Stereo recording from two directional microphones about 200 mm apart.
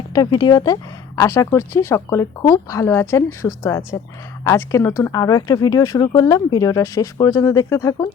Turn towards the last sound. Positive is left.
turn(degrees=15)  # may be behind; listen again after turning